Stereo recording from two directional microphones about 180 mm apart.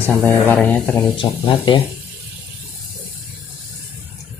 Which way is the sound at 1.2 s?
25° left (ahead or behind).